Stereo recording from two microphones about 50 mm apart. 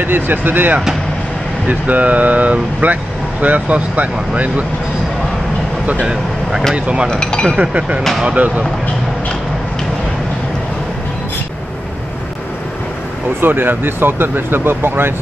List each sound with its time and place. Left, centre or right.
0.0 s speech: right
1.7 s speech: right
6.7 s speech: right
7.1 s speech: centre
7.6 s speech: right
13.4 s speech: right